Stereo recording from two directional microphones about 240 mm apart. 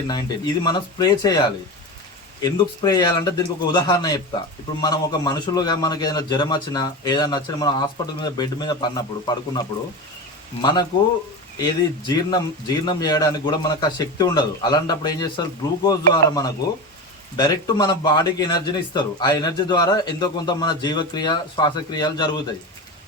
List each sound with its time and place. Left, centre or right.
0.1 s a man's voice: centre
10.6 s a man's voice: centre